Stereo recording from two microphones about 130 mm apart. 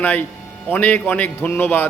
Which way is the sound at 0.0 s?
10° left (ahead or behind).